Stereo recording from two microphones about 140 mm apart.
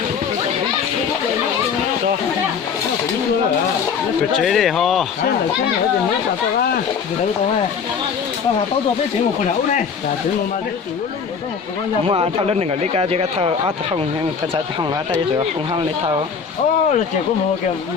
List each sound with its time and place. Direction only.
4.4 s a man's voice: centre (ahead or behind)
12.0 s speech: 45° right (ahead or behind)